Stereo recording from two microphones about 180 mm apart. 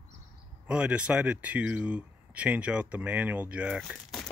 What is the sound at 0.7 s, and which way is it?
Speech, 5° right (ahead or behind).